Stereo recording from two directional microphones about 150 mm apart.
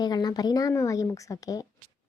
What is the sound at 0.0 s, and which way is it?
Speech, 25° left (ahead or behind).